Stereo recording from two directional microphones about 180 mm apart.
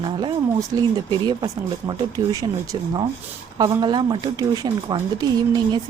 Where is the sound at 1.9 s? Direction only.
20° right (ahead or behind).